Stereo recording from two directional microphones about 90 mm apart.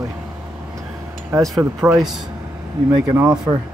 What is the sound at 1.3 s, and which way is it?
Speech, 30° right (ahead or behind).